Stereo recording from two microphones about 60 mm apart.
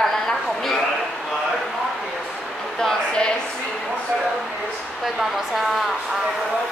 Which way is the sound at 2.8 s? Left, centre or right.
Centre.